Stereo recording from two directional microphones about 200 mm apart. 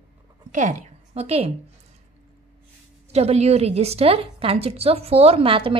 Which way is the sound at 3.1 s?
30° right (ahead or behind).